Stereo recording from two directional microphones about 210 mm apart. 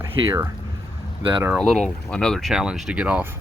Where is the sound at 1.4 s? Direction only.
Centre (ahead or behind).